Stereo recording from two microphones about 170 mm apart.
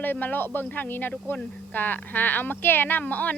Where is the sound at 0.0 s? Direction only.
10° left (ahead or behind).